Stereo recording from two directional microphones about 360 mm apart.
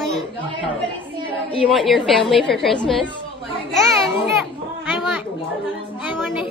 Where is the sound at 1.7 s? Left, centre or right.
Centre.